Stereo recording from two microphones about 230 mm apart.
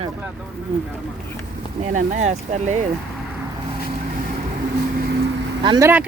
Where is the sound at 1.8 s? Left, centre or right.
Right.